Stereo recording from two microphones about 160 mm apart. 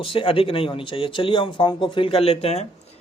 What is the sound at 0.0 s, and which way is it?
Speech, 35° left (ahead or behind).